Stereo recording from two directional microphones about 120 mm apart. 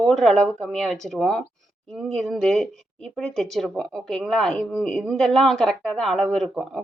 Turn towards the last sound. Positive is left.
turn(degrees=0)  # may be behind; listen again after turning